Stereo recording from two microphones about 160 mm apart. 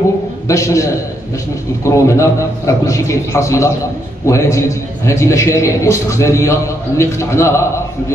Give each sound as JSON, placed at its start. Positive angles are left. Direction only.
{"t": 0.5, "sound": "a man's voice", "side_deg": 20}
{"t": 1.9, "sound": "a man's voice", "side_deg": 20}